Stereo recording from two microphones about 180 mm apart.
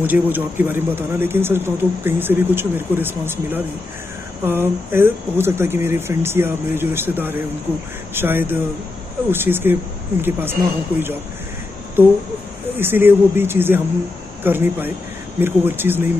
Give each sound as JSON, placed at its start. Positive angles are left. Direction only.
{"t": 0.0, "sound": "speech", "side_deg": -10}